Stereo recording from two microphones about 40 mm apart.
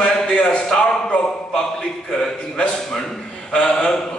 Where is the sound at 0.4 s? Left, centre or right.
Left.